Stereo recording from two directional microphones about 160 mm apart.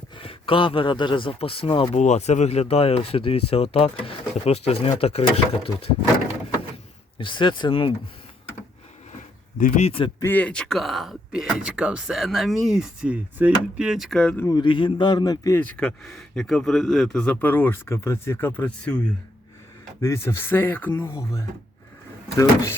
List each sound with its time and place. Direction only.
0.2 s a man's voice: 35° left (ahead or behind)
7.2 s a man's voice: 30° left (ahead or behind)
9.6 s speech: 50° left (ahead or behind)
10.2 s speech: 10° left (ahead or behind)
14.4 s a man's voice: 30° left (ahead or behind)
15.6 s speech: 10° left (ahead or behind)
20.0 s a man's voice: 20° left (ahead or behind)